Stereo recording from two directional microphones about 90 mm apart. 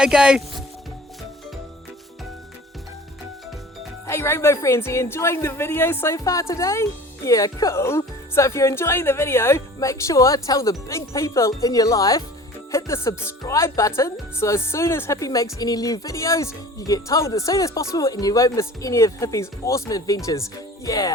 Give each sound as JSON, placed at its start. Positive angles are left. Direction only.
{"t": 0.0, "sound": "speech", "side_deg": -10}
{"t": 4.0, "sound": "speech", "side_deg": 30}